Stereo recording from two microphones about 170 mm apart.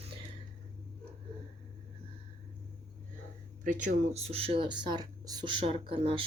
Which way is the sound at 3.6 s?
50° right (ahead or behind).